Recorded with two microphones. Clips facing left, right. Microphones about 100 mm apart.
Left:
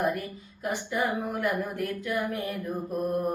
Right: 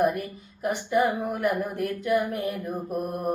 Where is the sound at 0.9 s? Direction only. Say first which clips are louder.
Right 6 dB; 25° right (ahead or behind).